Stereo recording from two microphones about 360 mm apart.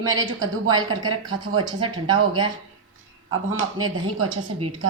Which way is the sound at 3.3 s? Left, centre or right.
Right.